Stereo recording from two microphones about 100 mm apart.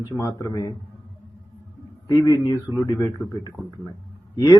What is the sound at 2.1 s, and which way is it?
Speech, 35° left (ahead or behind).